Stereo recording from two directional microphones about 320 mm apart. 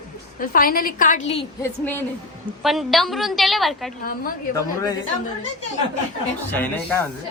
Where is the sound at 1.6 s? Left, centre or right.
Centre.